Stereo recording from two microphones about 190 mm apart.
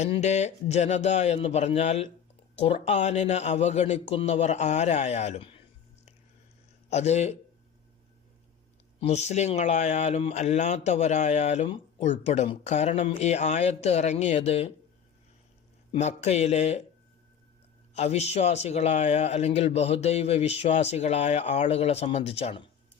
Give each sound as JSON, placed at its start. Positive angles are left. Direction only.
{"t": 0.0, "sound": "speech", "side_deg": 35}
{"t": 6.9, "sound": "speech", "side_deg": 35}
{"t": 9.0, "sound": "speech", "side_deg": 35}
{"t": 15.9, "sound": "speech", "side_deg": 35}
{"t": 17.9, "sound": "speech", "side_deg": 35}